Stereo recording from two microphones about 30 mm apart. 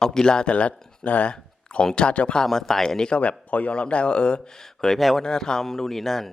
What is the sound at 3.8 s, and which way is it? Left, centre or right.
Speech, left.